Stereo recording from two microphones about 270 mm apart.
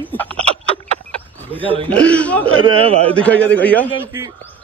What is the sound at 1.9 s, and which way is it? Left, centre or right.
Speech, centre.